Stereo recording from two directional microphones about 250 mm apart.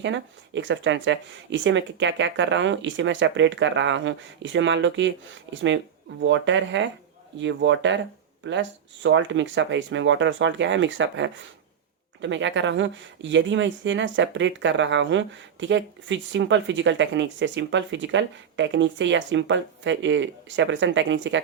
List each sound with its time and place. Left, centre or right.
0.0 s speech: right
9.0 s speech: right